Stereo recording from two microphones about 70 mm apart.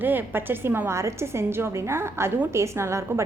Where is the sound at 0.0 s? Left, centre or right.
Right.